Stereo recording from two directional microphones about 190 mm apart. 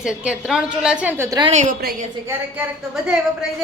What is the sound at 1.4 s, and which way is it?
Speech, 35° right (ahead or behind).